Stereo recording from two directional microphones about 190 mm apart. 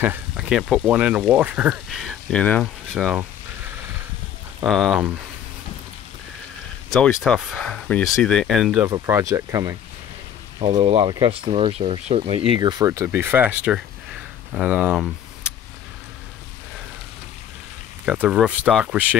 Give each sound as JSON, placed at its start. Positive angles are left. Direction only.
{"t": 0.0, "sound": "speech", "side_deg": -5}
{"t": 4.6, "sound": "speech", "side_deg": 0}
{"t": 6.9, "sound": "speech", "side_deg": 0}
{"t": 8.8, "sound": "speech", "side_deg": -15}
{"t": 10.6, "sound": "speech", "side_deg": -30}
{"t": 18.0, "sound": "speech", "side_deg": -5}